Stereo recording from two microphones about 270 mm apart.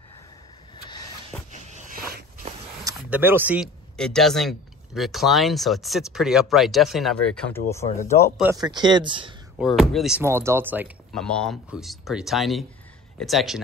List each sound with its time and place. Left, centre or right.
1.5 s a sound: right
2.8 s speech: centre
8.4 s speech: centre
9.6 s speech: centre